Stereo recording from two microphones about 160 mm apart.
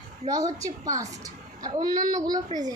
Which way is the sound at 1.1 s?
20° right (ahead or behind).